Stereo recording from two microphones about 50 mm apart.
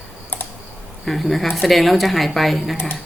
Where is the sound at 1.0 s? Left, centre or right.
Centre.